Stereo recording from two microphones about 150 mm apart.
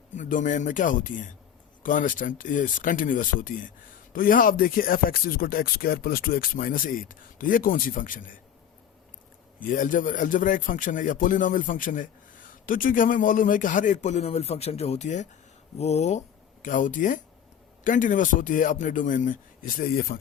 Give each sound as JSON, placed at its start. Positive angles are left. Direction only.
{"t": 0.1, "sound": "a man's voice", "side_deg": 60}
{"t": 9.6, "sound": "a man's voice", "side_deg": 60}
{"t": 16.6, "sound": "a man's voice", "side_deg": 60}